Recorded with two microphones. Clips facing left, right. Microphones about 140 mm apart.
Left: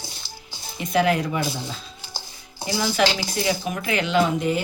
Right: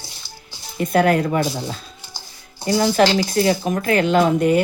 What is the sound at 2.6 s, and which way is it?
Speech, 45° right (ahead or behind).